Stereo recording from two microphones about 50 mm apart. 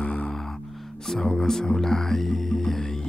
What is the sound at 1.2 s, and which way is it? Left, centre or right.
Speech, centre.